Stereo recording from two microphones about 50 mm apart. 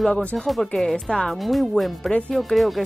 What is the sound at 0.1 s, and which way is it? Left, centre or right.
Speech, left.